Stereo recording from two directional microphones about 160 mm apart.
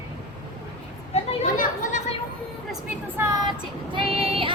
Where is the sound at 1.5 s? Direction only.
55° left (ahead or behind).